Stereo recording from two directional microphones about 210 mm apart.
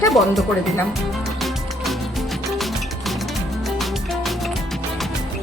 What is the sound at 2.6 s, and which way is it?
Music, centre (ahead or behind).